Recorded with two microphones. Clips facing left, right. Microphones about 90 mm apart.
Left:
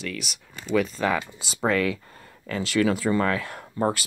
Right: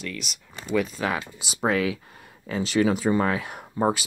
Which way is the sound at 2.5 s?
20° right (ahead or behind).